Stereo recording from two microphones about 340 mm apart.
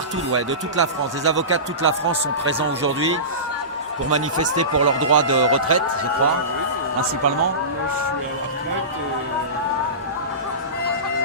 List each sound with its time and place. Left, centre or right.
0.3 s speech: right
4.1 s speech: right